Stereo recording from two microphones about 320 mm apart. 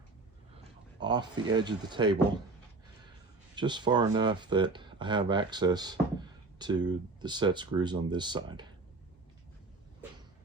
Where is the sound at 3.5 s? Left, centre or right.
Centre.